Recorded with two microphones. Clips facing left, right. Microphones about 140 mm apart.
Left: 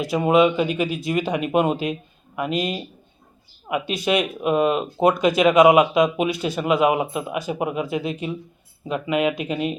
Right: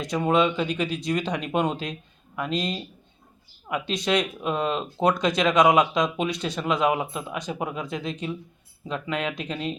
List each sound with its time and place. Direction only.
0.0 s speech: 10° left (ahead or behind)